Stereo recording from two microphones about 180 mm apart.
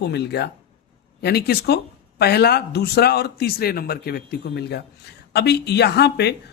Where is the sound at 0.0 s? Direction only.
65° left (ahead or behind).